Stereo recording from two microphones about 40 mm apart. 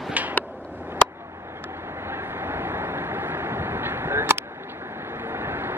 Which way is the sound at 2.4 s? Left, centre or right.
Right.